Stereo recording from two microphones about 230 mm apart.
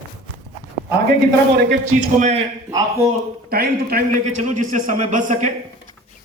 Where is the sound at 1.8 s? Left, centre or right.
Right.